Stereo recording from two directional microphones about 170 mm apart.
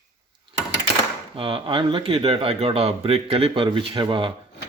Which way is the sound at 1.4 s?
30° right (ahead or behind).